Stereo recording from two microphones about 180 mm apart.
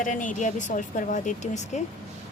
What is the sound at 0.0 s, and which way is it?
Speech, 45° left (ahead or behind).